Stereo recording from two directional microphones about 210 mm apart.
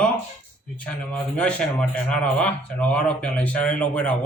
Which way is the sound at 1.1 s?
5° left (ahead or behind).